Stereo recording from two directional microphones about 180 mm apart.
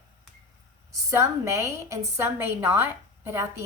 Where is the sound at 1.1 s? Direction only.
15° right (ahead or behind).